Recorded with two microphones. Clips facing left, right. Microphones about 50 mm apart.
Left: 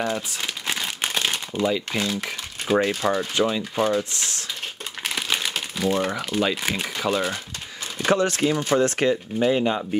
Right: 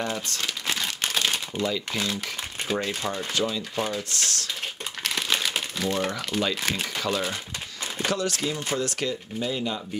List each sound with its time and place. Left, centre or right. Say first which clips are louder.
0.1 s crumpling: left 2 dB; centre
1.6 s speech: left 6 dB; centre
2.9 s speech: left 6 dB; left
5.0 s crumpling: left 1 dB; centre
5.8 s speech: left 5 dB; centre
8.0 s speech: left 7 dB; left